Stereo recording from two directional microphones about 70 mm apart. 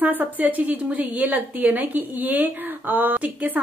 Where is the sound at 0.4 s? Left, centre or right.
Right.